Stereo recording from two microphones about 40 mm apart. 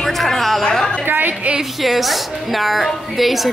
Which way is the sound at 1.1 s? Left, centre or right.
Right.